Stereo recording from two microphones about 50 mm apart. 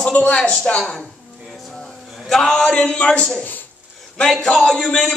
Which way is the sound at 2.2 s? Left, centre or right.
Centre.